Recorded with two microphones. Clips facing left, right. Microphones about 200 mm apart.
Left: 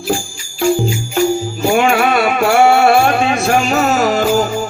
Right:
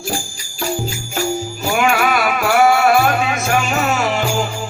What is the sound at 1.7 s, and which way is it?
Music, 30° left (ahead or behind).